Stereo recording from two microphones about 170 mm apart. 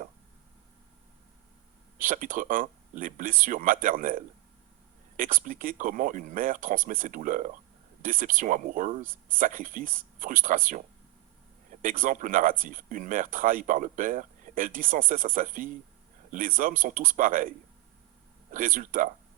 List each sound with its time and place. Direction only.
2.0 s speech: 50° right (ahead or behind)
18.5 s speech: 50° right (ahead or behind)